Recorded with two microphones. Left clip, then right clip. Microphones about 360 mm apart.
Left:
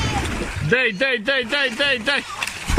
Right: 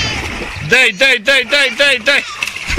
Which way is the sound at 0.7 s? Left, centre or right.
Centre.